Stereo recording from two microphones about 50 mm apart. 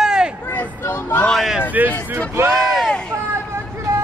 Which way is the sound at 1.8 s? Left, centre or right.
Right.